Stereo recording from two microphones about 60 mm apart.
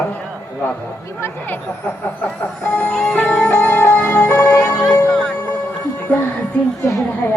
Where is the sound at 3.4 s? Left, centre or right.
Left.